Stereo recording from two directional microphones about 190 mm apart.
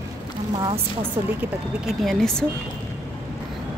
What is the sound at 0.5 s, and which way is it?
Speech, 25° right (ahead or behind).